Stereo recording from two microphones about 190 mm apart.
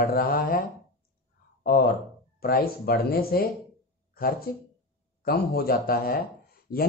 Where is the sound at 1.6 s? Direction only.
50° left (ahead or behind).